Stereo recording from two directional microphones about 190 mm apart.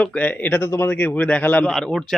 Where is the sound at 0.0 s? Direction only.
5° left (ahead or behind).